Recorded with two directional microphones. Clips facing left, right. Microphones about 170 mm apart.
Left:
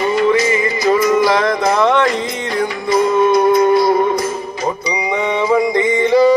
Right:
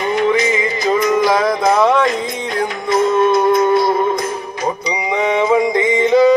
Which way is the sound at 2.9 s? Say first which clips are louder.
Left 1 dB; 25° right (ahead or behind).